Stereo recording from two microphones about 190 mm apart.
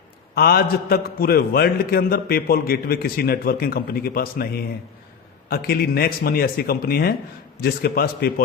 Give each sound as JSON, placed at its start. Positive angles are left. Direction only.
{"t": 0.3, "sound": "a man's voice", "side_deg": 55}